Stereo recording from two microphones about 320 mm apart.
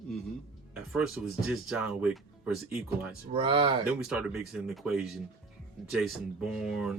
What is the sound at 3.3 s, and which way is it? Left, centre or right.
Speech, centre.